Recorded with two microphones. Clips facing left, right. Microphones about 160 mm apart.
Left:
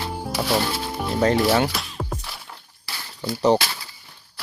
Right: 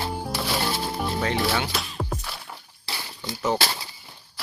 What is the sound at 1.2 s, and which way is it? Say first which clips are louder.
Speech: left 8 dB; 40° left (ahead or behind).